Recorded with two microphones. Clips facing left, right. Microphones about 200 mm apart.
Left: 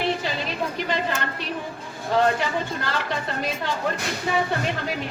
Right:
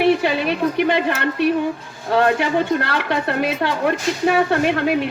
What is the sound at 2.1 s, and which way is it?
A woman's voice, 65° right (ahead or behind).